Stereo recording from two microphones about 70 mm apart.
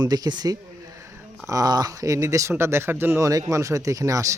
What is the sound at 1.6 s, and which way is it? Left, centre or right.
A man's voice, right.